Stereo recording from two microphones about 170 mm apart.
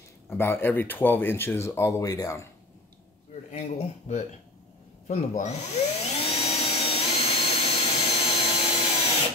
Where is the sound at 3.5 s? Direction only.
40° left (ahead or behind).